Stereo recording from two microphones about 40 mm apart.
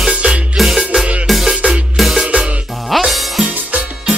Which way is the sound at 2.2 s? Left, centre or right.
Right.